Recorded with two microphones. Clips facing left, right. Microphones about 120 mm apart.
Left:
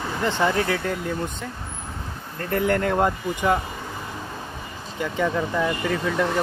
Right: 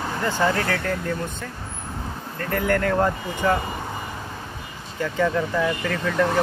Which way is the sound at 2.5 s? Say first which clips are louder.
Even; 25° left (ahead or behind).